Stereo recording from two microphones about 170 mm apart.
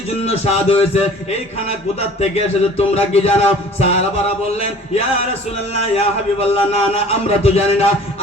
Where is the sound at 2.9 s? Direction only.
40° left (ahead or behind).